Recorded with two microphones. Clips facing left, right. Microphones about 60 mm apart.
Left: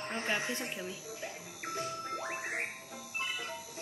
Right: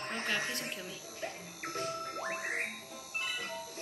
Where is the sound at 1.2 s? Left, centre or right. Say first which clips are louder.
Right 4 dB; right.